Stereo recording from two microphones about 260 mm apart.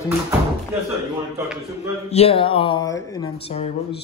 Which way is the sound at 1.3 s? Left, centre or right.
Centre.